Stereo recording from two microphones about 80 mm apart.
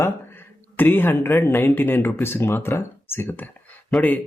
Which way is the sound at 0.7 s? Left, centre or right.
Left.